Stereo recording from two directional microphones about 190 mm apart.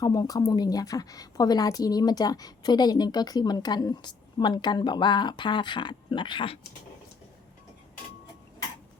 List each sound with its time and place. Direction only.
0.0 s a woman's voice: 20° left (ahead or behind)